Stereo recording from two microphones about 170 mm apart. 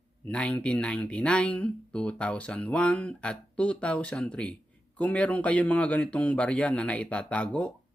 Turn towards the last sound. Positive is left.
turn(degrees=5)  # may be behind; listen again after turning